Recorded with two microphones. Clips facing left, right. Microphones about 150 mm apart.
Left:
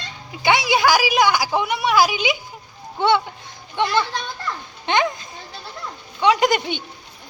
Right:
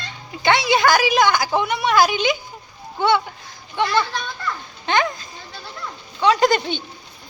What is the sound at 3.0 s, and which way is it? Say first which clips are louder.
A woman's voice: even; 25° left (ahead or behind).